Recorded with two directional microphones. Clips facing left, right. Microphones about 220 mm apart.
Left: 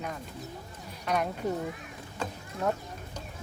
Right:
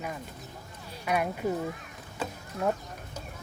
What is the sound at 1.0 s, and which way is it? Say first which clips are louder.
Speech: right 1 dB; 5° right (ahead or behind).